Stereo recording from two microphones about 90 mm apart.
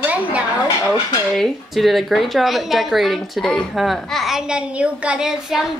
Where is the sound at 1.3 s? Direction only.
Centre (ahead or behind).